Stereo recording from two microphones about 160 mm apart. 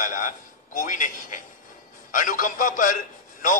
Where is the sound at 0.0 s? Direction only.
55° left (ahead or behind).